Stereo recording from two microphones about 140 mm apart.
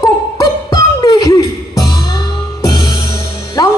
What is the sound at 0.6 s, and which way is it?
Music, 25° left (ahead or behind).